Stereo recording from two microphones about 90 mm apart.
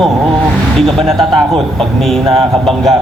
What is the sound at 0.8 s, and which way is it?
Speech, 5° left (ahead or behind).